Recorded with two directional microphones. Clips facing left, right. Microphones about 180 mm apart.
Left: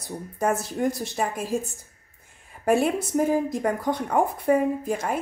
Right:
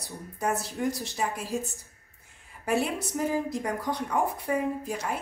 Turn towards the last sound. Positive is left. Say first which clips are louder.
# left 5 dB
turn(degrees=50)  # may be behind; listen again after turning